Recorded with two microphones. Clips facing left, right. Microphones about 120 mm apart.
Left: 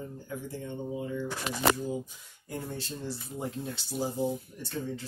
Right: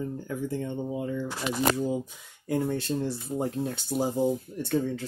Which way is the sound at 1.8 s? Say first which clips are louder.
Right 5 dB; 80° right.